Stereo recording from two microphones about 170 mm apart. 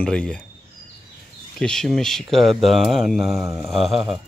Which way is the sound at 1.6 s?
5° left (ahead or behind).